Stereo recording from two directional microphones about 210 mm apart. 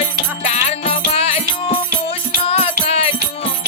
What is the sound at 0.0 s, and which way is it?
Music, 30° left (ahead or behind).